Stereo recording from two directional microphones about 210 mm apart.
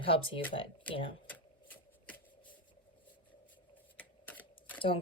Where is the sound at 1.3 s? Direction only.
10° left (ahead or behind).